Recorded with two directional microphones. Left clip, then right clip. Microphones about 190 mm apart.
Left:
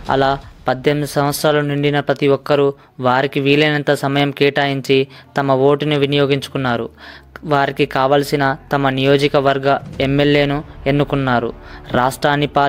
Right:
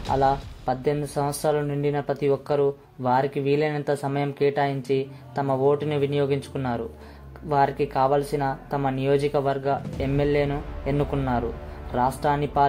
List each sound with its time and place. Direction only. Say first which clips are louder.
0.1 s speech: left 6 dB; 35° left (ahead or behind)